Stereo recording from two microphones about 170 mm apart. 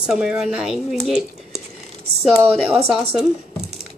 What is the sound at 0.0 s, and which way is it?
Speech, 5° right (ahead or behind).